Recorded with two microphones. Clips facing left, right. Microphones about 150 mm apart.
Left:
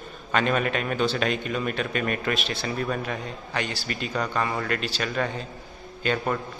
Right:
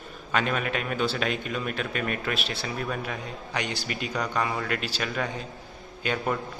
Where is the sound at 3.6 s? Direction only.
20° right (ahead or behind).